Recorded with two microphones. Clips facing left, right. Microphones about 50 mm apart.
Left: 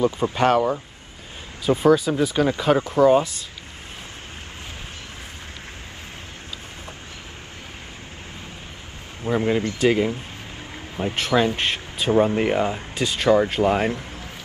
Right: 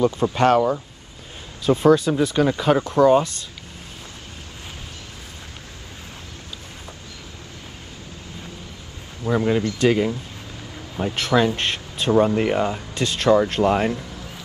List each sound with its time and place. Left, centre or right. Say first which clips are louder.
0.0 s speech: right 2 dB; centre
0.5 s speech: right 2 dB; centre
9.2 s speech: right 1 dB; left
9.8 s speech: even; centre
11.0 s speech: right 1 dB; left
11.3 s speech: right 1 dB; centre